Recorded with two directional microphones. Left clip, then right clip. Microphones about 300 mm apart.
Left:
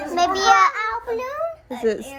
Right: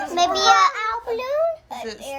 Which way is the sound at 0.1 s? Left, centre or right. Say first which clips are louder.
Even; right.